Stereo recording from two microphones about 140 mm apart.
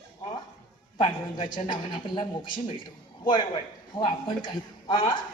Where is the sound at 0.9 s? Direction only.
30° left (ahead or behind).